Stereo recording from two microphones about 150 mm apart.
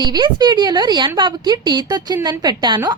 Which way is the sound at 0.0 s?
30° right (ahead or behind).